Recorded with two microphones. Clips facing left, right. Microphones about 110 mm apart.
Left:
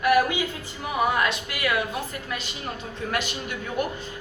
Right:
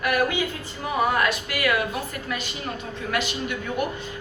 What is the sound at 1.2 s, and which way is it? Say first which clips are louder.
Speech: right 2 dB; 25° left (ahead or behind).